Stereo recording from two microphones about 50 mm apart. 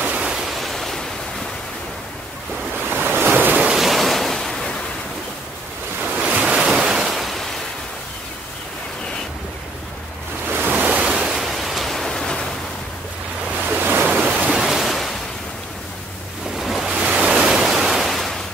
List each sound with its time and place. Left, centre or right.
0.2 s waves: centre
0.6 s pink noise: centre
2.9 s waves: right
3.8 s waves: centre
6.1 s waves: right
6.5 s waves: centre
10.5 s waves: right
11.0 s pink noise: centre
13.7 s waves: right
14.5 s pink noise: centre
16.5 s waves: centre